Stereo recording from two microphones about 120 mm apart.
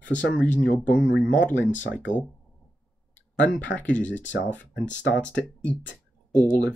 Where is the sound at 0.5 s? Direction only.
90° left.